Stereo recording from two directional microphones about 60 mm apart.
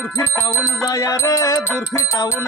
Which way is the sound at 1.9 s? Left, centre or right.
Left.